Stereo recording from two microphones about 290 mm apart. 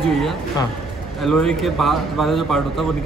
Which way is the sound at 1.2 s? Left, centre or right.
Centre.